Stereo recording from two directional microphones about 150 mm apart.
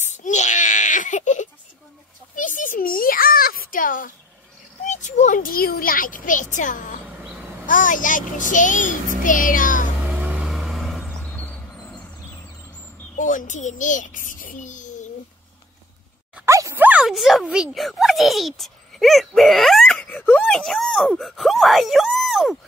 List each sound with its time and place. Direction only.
0.0 s wail: 55° left (ahead or behind)
2.3 s a sound: 60° left (ahead or behind)
4.8 s speech: 55° left (ahead or behind)
10.0 s vehicle: 10° right (ahead or behind)
13.1 s a child's voice: 60° left (ahead or behind)
16.4 s speech: 20° right (ahead or behind); by 22.6 s centre (ahead or behind)